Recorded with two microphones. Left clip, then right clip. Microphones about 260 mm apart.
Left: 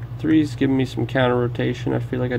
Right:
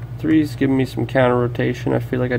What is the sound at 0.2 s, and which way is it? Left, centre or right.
Speech, centre.